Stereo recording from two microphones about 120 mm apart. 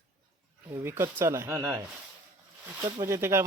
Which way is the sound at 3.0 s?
25° right (ahead or behind).